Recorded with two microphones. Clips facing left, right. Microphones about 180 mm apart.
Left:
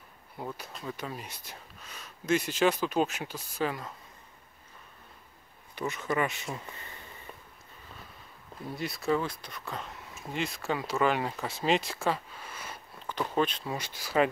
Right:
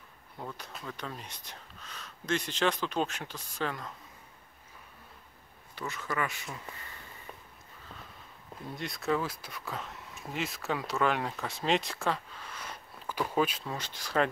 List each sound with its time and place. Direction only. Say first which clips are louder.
0.4 s speech: left 3 dB; 10° left (ahead or behind)
5.8 s speech: left 4 dB; 20° left (ahead or behind)
8.6 s speech: left 2 dB; 5° left (ahead or behind)
13.0 s speech: left 1 dB; 10° right (ahead or behind)
13.7 s speech: left 2 dB; 10° left (ahead or behind)